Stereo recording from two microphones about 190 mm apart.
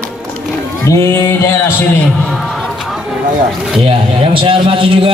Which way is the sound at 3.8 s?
30° right (ahead or behind).